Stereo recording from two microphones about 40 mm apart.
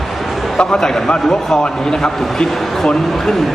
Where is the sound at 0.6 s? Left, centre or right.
Centre.